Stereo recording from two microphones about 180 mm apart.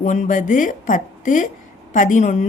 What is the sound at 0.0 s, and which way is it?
A woman's voice, 45° left (ahead or behind).